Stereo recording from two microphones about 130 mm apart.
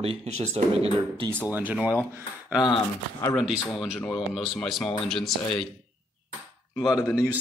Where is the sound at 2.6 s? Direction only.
30° left (ahead or behind).